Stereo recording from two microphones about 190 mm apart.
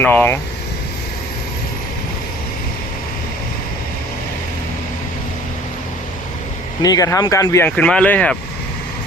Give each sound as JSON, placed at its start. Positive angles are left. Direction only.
{"t": 0.0, "sound": "speech", "side_deg": 10}
{"t": 6.8, "sound": "speech", "side_deg": 20}